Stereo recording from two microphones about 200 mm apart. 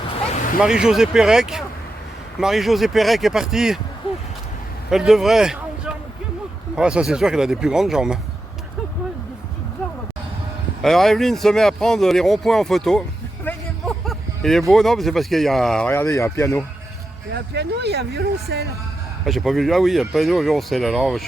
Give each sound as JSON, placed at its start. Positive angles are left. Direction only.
{"t": 0.1, "sound": "a sound", "side_deg": 35}
{"t": 0.6, "sound": "speech", "side_deg": -5}
{"t": 4.9, "sound": "a man's voice", "side_deg": 0}
{"t": 10.8, "sound": "speech", "side_deg": 0}
{"t": 17.3, "sound": "speech", "side_deg": -55}
{"t": 19.2, "sound": "speech", "side_deg": 0}